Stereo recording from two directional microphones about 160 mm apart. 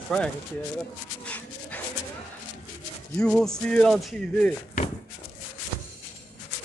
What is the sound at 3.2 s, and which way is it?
Speech, 5° left (ahead or behind).